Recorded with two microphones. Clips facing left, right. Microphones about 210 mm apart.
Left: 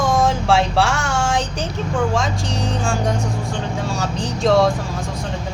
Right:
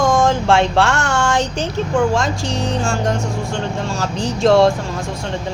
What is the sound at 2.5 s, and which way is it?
Speech, centre (ahead or behind).